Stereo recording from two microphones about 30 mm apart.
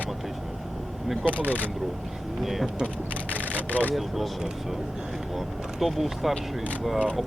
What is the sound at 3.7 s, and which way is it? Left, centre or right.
Speech, left.